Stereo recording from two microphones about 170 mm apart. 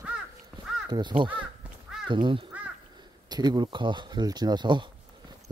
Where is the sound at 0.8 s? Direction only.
25° right (ahead or behind).